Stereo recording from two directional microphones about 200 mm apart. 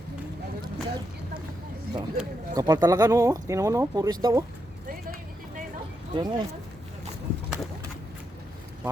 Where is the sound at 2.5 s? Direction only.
20° right (ahead or behind).